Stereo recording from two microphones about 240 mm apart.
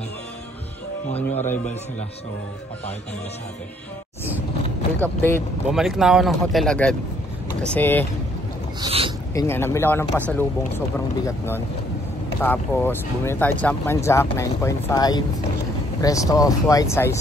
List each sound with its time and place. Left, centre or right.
1.1 s a man's voice: left
5.0 s speech: centre
5.7 s speech: centre
8.8 s speech: right
9.3 s speech: centre
11.2 s speech: centre